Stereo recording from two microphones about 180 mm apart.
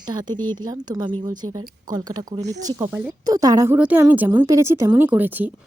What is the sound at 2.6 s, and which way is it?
Speech, 15° right (ahead or behind).